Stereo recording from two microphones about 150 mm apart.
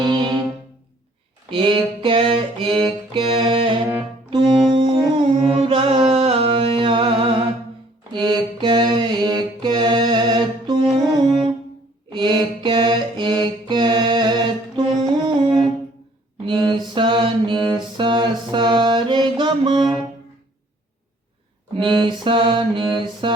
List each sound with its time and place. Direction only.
0.0 s music: 30° right (ahead or behind)
1.5 s a sound: 35° right (ahead or behind)
3.1 s music: 35° right (ahead or behind)
8.1 s mantra: 30° right (ahead or behind)
12.1 s mantra: 30° right (ahead or behind)
15.3 s music: 30° right (ahead or behind)
16.5 s mantra: 30° right (ahead or behind)
21.8 s mantra: 30° right (ahead or behind)